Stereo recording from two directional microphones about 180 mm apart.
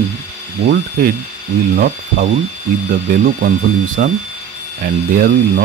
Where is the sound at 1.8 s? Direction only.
45° right (ahead or behind).